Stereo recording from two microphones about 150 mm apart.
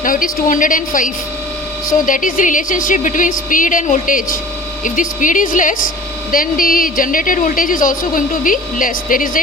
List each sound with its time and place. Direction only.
0.0 s a woman's voice: 65° left (ahead or behind)